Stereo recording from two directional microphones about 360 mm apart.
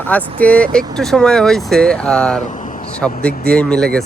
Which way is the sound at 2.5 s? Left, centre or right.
Left.